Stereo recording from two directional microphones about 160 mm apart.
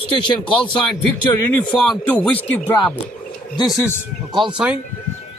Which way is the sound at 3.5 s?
25° left (ahead or behind).